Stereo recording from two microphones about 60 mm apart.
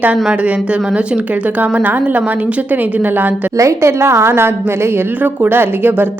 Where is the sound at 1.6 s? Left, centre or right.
Right.